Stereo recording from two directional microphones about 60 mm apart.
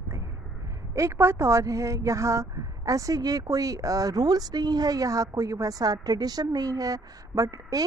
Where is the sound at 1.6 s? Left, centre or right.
Right.